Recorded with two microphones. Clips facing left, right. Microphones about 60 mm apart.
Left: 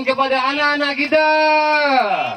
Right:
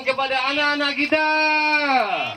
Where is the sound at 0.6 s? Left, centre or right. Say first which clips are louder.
Left 3 dB; left.